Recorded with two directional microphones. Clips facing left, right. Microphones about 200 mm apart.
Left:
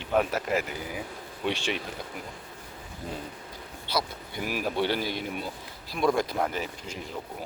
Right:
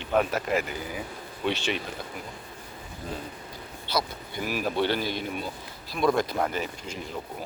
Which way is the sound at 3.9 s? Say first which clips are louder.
Right 1 dB; 10° left (ahead or behind).